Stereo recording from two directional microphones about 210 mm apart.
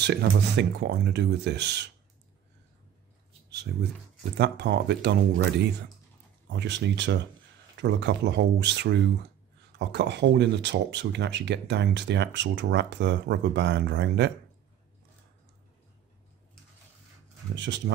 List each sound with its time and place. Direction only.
0.0 s speech: 50° right (ahead or behind)
3.7 s speech: 50° right (ahead or behind)
6.5 s speech: 55° right (ahead or behind)
17.6 s speech: 55° right (ahead or behind)